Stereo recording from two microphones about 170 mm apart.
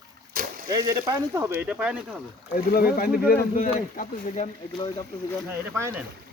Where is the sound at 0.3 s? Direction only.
55° right (ahead or behind).